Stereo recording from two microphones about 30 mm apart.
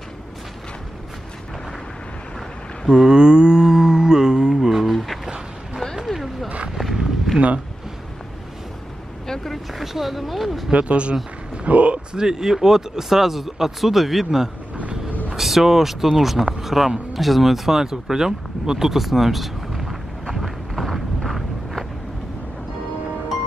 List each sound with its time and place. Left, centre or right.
2.9 s mantra: right
4.6 s a sound: centre
4.8 s a sound: centre
7.3 s speech: right
9.3 s speech: centre
9.8 s speech: centre
10.7 s speech: right
12.1 s speech: right; by 20.0 s centre
20.7 s a sound: centre